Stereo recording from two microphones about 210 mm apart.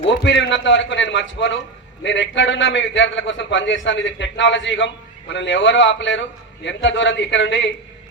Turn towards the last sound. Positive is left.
turn(degrees=60)  # may be behind; listen again after turning